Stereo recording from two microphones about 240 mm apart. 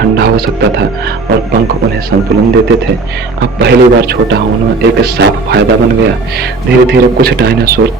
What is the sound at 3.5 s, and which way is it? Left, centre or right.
Speech, right.